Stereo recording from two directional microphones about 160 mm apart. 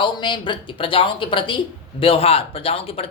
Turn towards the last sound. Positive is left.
turn(degrees=35)  # may be behind; listen again after turning